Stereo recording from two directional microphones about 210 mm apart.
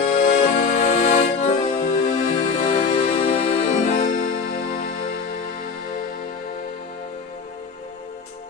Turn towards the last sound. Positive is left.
turn(degrees=30)  # may be behind; listen again after turning